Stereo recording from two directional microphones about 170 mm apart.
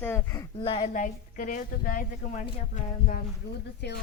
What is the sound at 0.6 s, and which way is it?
Speech, 30° left (ahead or behind).